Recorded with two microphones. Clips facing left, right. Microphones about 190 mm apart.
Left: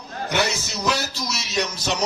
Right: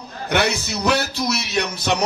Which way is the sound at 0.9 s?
60° right (ahead or behind).